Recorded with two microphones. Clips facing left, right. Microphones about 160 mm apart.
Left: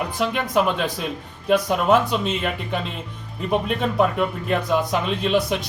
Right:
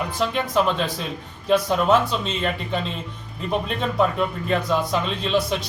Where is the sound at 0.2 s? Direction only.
15° left (ahead or behind).